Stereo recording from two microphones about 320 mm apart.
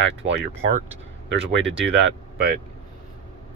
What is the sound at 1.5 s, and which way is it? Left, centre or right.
Speech, right.